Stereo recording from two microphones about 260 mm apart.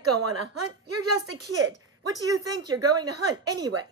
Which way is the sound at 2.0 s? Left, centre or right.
Centre.